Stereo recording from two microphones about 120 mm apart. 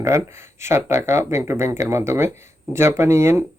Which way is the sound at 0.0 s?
25° right (ahead or behind).